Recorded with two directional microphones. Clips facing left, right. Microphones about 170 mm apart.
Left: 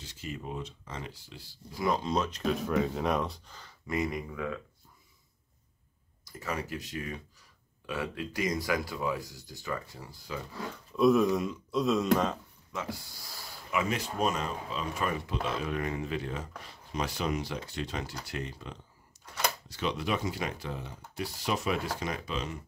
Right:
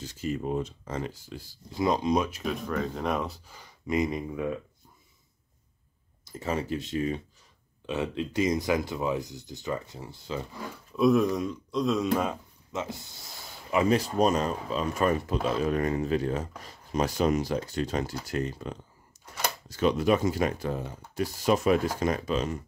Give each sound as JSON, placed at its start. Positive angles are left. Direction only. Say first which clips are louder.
{"t": 0.0, "sound": "speech", "louder": "right 9 dB", "side_deg": -45}
{"t": 1.8, "sound": "speech", "louder": "right 4 dB", "side_deg": -20}
{"t": 6.2, "sound": "speech", "louder": "right 5 dB", "side_deg": -25}
{"t": 11.0, "sound": "speech", "louder": "right 1 dB", "side_deg": 0}
{"t": 12.7, "sound": "speech", "louder": "right 3 dB", "side_deg": -25}
{"t": 13.7, "sound": "speech", "louder": "right 7 dB", "side_deg": -35}
{"t": 19.1, "sound": "a sound", "louder": "right 1 dB", "side_deg": -45}
{"t": 19.7, "sound": "speech", "louder": "right 11 dB", "side_deg": -45}